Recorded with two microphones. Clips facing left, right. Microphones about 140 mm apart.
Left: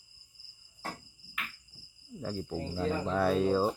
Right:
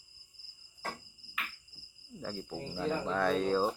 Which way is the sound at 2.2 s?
5° left (ahead or behind).